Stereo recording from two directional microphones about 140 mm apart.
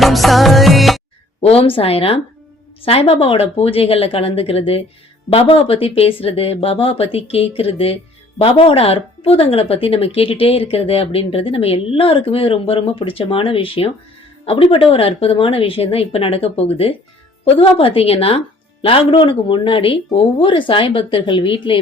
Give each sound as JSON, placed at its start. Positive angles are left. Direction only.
{"t": 0.0, "sound": "music", "side_deg": 0}
{"t": 1.4, "sound": "speech", "side_deg": 45}